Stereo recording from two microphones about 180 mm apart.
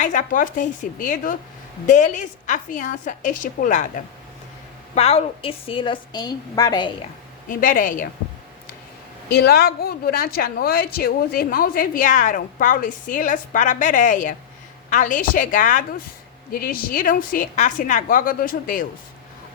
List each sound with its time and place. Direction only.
0.0 s speech: 45° left (ahead or behind)
4.9 s a woman's voice: 35° left (ahead or behind)
7.4 s speech: 50° left (ahead or behind)
9.3 s speech: 60° left (ahead or behind)